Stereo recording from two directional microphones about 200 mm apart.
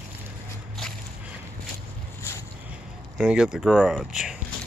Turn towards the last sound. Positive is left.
turn(degrees=-5)  # may be behind; listen again after turning